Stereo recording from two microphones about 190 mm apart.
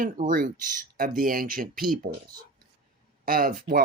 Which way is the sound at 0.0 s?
45° right (ahead or behind).